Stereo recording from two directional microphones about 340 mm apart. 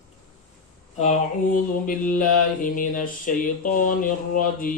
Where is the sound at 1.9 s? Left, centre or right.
Left.